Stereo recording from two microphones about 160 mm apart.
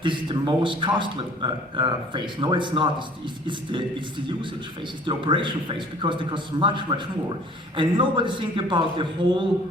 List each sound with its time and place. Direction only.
0.0 s a man's voice: 30° right (ahead or behind)
5.0 s a man's voice: 30° right (ahead or behind)